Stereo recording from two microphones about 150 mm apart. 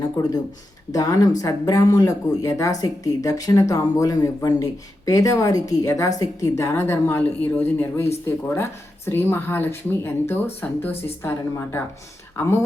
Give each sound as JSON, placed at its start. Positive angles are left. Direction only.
{"t": 0.9, "sound": "speech", "side_deg": 20}